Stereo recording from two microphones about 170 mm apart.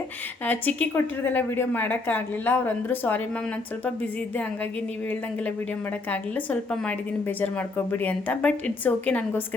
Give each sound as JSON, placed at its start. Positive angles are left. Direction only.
{"t": 0.4, "sound": "a woman's voice", "side_deg": 10}
{"t": 6.1, "sound": "a woman's voice", "side_deg": 10}